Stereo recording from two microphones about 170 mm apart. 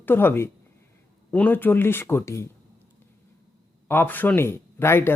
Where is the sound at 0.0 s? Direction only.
10° left (ahead or behind).